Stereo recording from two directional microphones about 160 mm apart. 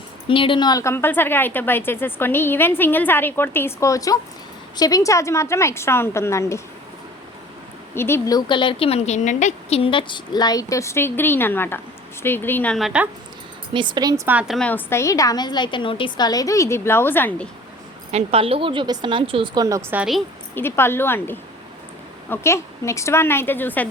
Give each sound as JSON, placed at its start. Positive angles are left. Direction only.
{"t": 0.3, "sound": "a woman's voice", "side_deg": 35}
{"t": 7.9, "sound": "a woman's voice", "side_deg": 15}
{"t": 8.4, "sound": "a woman's voice", "side_deg": 30}
{"t": 12.7, "sound": "a woman's voice", "side_deg": -5}
{"t": 13.7, "sound": "speech", "side_deg": -30}
{"t": 14.3, "sound": "a woman's voice", "side_deg": -5}
{"t": 18.1, "sound": "speech", "side_deg": -35}
{"t": 19.6, "sound": "speech", "side_deg": -20}
{"t": 20.0, "sound": "a woman's voice", "side_deg": 0}
{"t": 20.6, "sound": "a woman's voice", "side_deg": 15}